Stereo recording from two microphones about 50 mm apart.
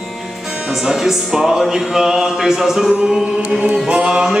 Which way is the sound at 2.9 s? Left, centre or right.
Centre.